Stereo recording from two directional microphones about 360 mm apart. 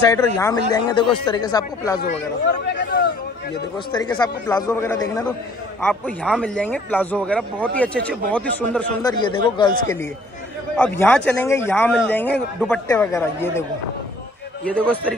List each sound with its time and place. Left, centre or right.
0.4 s speech: centre
2.0 s speech: left
3.9 s a man's voice: centre